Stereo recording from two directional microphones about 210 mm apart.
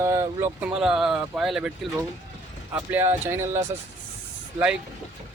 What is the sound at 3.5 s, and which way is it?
Speech, 35° right (ahead or behind).